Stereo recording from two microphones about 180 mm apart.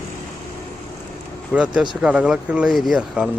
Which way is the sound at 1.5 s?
5° right (ahead or behind).